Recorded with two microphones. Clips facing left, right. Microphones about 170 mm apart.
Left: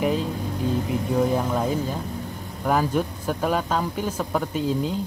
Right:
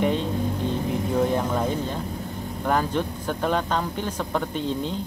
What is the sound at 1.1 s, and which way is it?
A man's voice, 5° left (ahead or behind).